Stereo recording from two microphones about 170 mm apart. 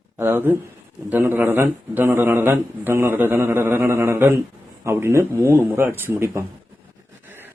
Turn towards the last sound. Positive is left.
turn(degrees=-15)  # may be behind; listen again after turning